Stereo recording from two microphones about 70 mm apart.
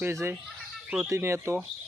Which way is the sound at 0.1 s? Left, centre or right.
Right.